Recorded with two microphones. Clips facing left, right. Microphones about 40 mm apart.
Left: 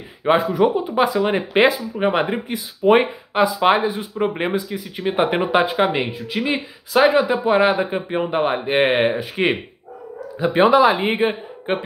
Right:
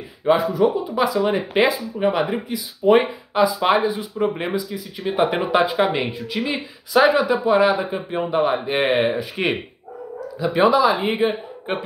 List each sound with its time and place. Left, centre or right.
0.2 s speech: left
0.9 s speech: left; by 7.2 s centre
7.2 s speech: left
10.4 s speech: left